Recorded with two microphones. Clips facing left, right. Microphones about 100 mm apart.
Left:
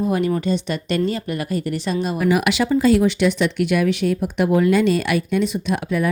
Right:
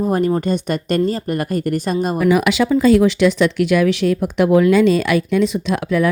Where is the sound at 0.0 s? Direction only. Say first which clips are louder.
Right 3 dB; 40° right (ahead or behind).